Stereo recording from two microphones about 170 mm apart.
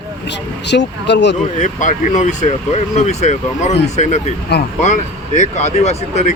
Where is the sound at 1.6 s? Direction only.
50° left (ahead or behind).